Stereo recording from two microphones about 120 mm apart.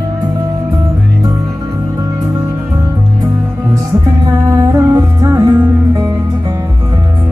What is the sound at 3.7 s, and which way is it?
Music, 30° right (ahead or behind).